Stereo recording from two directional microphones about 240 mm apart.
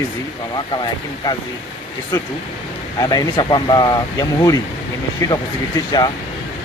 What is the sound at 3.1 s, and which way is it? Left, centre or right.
Speech, centre.